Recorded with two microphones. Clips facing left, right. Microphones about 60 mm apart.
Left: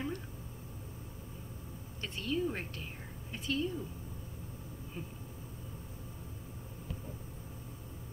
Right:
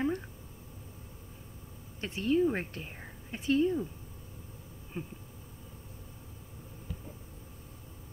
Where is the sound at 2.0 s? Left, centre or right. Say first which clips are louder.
Right 7 dB; right.